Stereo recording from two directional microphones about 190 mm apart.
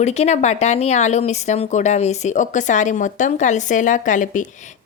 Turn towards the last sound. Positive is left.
turn(degrees=45)  # may be behind; listen again after turning